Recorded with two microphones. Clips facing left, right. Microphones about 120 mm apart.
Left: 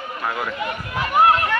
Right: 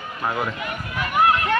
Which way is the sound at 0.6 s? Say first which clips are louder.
Left 2 dB; 30° left (ahead or behind).